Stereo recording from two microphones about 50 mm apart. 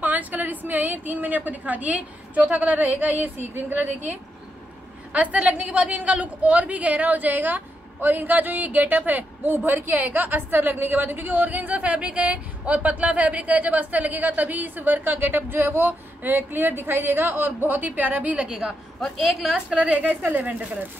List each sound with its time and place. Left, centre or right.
0.0 s a woman's voice: right; by 18.8 s centre
18.9 s a woman's voice: centre
19.9 s a woman's voice: right